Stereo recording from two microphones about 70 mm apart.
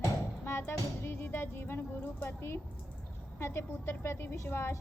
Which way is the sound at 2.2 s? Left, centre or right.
Left.